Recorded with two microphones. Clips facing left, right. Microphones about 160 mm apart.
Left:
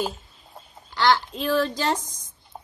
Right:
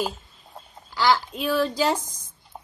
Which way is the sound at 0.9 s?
5° right (ahead or behind).